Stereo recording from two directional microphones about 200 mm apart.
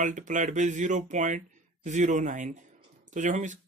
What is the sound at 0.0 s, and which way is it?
Speech, 40° right (ahead or behind).